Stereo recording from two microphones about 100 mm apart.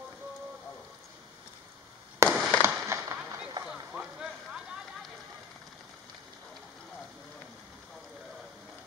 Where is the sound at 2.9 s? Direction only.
25° right (ahead or behind).